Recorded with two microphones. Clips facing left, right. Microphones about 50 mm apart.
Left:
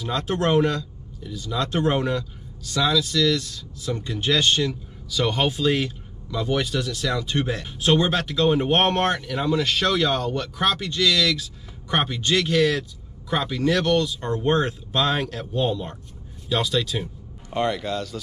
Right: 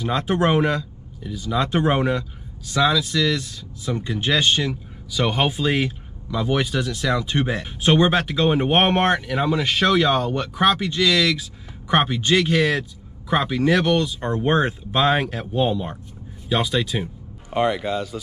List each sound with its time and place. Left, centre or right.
0.0 s speech: centre